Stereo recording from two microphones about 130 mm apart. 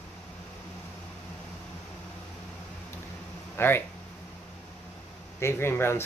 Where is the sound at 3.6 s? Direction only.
15° left (ahead or behind).